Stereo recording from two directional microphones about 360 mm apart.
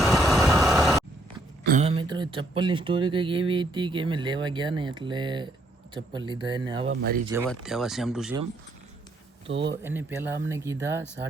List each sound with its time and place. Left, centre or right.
0.0 s vehicle: centre
1.6 s speech: centre
6.8 s speech: right
7.4 s speech: centre
9.5 s speech: right
9.8 s speech: centre